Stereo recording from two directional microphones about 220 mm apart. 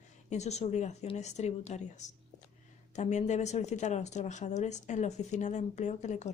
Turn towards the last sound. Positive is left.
turn(degrees=30)  # may be behind; listen again after turning